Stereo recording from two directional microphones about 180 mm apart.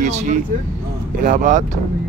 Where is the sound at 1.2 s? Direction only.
45° right (ahead or behind).